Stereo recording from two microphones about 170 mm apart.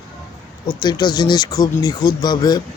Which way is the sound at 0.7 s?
25° left (ahead or behind).